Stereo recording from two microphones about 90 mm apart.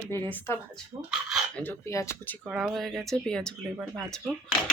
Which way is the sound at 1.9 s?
35° left (ahead or behind).